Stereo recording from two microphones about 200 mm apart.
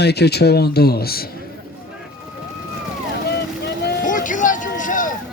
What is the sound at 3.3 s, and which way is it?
Vehicle, 55° left (ahead or behind).